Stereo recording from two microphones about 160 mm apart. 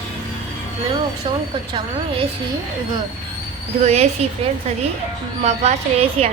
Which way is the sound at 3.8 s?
40° right (ahead or behind).